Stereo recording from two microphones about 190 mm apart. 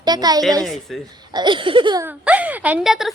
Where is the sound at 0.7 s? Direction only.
Centre (ahead or behind).